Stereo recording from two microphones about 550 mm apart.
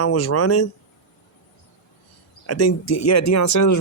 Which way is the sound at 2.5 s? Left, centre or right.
Left.